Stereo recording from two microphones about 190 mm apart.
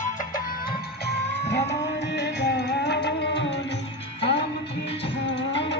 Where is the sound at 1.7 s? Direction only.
65° left (ahead or behind).